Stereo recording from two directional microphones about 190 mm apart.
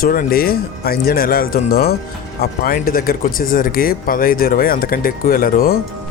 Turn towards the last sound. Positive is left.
turn(degrees=50)  # may be behind; listen again after turning